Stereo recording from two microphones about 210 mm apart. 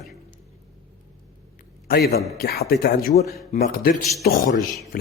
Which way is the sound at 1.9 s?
45° left (ahead or behind).